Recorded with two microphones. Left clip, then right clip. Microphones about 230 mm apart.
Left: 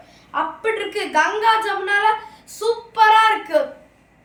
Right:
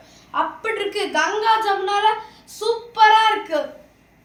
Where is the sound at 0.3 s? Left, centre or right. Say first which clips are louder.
Left 1 dB; centre.